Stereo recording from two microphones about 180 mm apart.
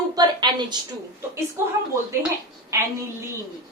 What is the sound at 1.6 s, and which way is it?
Speech, 15° right (ahead or behind).